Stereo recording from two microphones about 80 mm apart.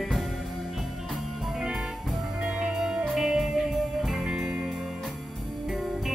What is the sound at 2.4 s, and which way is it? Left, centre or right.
Music, centre.